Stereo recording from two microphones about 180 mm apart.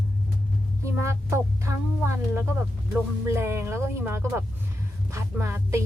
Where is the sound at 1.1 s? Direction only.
15° right (ahead or behind).